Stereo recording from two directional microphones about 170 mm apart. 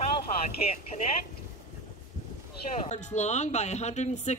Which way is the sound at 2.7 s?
40° left (ahead or behind).